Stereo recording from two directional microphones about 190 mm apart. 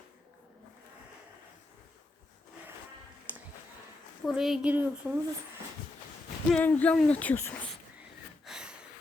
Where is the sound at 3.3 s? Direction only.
10° right (ahead or behind).